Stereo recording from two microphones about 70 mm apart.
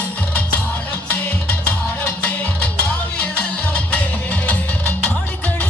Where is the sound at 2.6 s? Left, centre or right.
Centre.